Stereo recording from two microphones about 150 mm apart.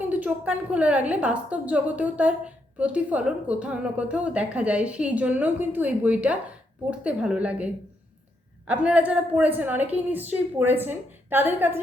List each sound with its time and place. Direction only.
0.0 s a woman's voice: 10° right (ahead or behind)